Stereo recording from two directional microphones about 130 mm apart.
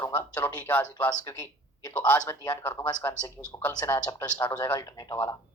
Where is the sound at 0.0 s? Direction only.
15° left (ahead or behind).